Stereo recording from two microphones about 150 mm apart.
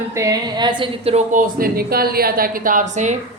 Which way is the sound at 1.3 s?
70° right (ahead or behind).